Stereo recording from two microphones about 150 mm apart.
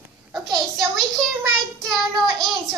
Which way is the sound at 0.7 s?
Centre (ahead or behind).